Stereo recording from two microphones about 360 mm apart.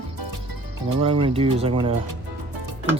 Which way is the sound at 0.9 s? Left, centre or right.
Centre.